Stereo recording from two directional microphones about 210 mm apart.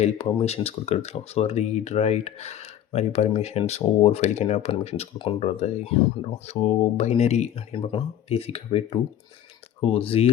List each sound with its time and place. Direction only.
0.0 s speech: 30° left (ahead or behind)